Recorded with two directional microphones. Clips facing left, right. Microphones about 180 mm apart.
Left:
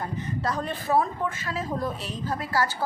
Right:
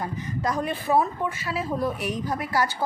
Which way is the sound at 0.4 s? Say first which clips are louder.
Right 4 dB; 10° right (ahead or behind).